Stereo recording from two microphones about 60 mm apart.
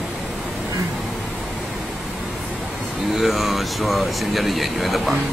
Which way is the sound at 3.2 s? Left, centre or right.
Centre.